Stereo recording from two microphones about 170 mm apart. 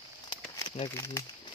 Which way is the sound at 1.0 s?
20° left (ahead or behind).